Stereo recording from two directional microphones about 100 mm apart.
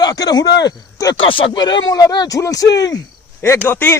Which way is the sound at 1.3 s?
60° left (ahead or behind).